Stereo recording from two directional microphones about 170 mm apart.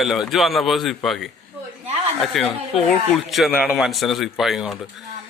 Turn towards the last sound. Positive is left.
turn(degrees=0)  # may be behind; listen again after turning